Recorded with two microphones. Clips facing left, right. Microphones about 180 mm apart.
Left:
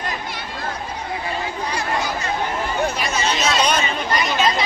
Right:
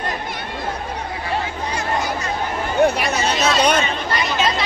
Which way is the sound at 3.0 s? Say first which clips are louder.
Right 2 dB; 60° right (ahead or behind).